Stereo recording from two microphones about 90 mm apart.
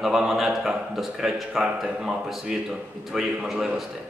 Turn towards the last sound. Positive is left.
turn(degrees=-5)  # may be behind; listen again after turning